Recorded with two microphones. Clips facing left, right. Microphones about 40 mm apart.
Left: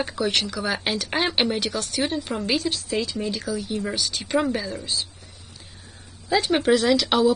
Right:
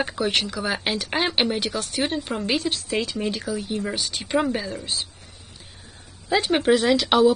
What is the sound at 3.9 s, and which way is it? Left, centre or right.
Speech, right.